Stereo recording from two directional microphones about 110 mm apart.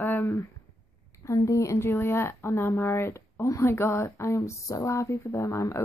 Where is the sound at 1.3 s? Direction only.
30° left (ahead or behind).